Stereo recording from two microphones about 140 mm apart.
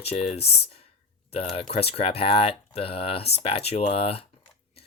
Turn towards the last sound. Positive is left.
turn(degrees=45)  # may be behind; listen again after turning